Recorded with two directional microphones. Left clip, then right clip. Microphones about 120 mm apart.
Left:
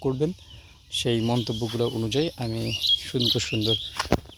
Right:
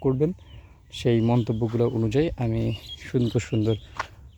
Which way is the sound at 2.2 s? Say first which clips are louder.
Right 2 dB; 30° right (ahead or behind).